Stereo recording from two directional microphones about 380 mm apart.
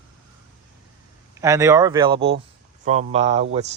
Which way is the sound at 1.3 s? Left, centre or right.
Centre.